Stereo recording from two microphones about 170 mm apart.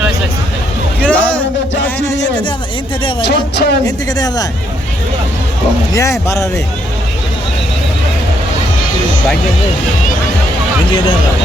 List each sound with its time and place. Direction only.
1.0 s a sound: 10° left (ahead or behind)
3.2 s speech: 85° left
3.8 s speech: 25° left (ahead or behind)
5.9 s speech: 15° left (ahead or behind)